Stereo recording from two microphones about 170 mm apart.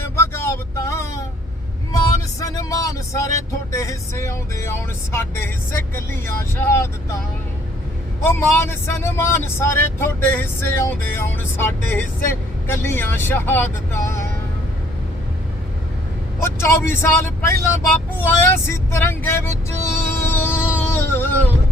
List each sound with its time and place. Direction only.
0.2 s vehicle: 15° left (ahead or behind)
1.9 s speech: 20° left (ahead or behind)
8.2 s speech: 15° left (ahead or behind)
16.6 s speech: 15° left (ahead or behind)
20.1 s music: 15° left (ahead or behind)